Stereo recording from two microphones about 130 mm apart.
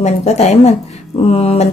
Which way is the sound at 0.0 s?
60° left (ahead or behind).